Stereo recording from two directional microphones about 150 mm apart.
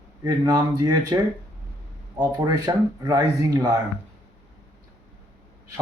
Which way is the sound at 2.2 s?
25° right (ahead or behind).